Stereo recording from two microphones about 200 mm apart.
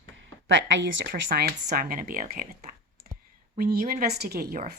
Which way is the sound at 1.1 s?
45° right (ahead or behind).